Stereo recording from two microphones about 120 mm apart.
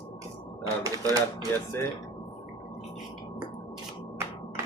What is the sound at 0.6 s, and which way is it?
Speech, 30° right (ahead or behind).